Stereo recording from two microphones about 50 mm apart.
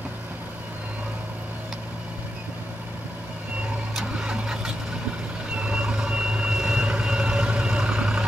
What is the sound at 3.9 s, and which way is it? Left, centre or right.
Vehicle, centre.